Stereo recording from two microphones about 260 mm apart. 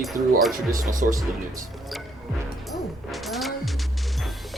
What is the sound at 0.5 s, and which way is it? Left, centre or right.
Speech, right.